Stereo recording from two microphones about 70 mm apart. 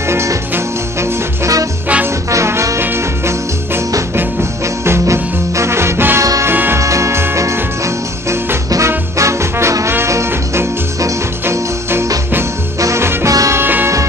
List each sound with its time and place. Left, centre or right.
0.1 s music: right
1.4 s music: right
2.3 s music: right
6.8 s music: right
8.6 s music: right
13.3 s music: right
13.6 s music: right